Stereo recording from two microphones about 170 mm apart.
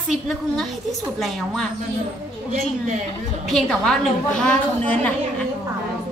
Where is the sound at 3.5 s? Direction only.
5° left (ahead or behind).